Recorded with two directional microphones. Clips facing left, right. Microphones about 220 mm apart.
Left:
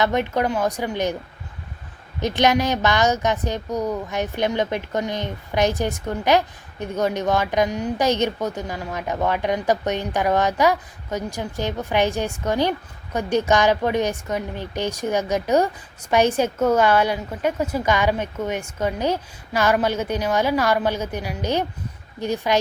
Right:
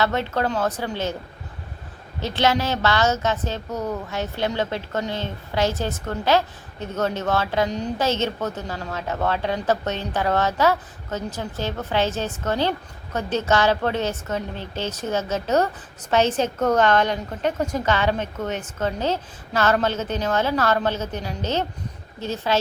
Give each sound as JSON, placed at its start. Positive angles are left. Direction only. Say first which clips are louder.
{"t": 0.0, "sound": "speech", "louder": "left 2 dB", "side_deg": 15}
{"t": 2.2, "sound": "speech", "louder": "left 3 dB", "side_deg": 15}